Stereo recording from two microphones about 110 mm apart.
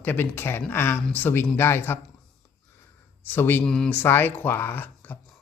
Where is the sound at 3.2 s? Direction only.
20° left (ahead or behind).